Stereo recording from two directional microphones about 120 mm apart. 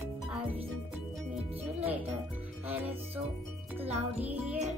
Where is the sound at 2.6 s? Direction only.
15° right (ahead or behind).